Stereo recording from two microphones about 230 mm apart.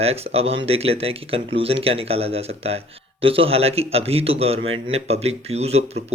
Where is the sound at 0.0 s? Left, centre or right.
Right.